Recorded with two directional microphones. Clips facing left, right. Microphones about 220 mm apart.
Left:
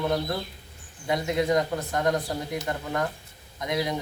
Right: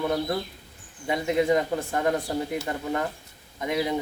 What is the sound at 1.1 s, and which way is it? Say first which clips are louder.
A man's voice: right 2 dB; 5° right (ahead or behind).